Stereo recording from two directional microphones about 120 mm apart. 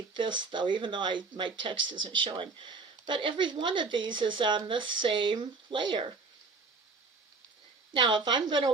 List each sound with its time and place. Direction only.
0.1 s speech: 40° right (ahead or behind)
7.9 s speech: 40° right (ahead or behind)